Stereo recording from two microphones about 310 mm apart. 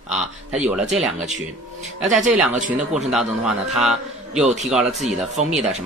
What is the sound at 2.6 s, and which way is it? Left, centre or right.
Speech, right.